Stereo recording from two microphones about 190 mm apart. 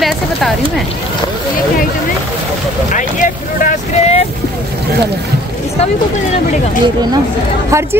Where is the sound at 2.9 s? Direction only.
40° left (ahead or behind).